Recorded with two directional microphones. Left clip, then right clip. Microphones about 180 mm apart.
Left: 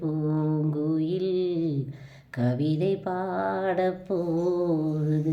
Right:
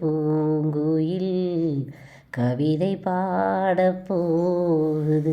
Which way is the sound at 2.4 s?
25° right (ahead or behind).